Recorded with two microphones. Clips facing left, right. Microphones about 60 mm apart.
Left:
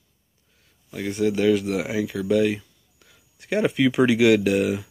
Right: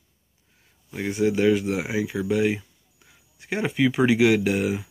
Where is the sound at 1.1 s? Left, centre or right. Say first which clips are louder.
Even; centre.